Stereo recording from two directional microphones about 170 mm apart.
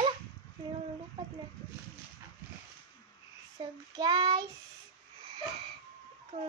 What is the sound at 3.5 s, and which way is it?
Speech, 25° right (ahead or behind).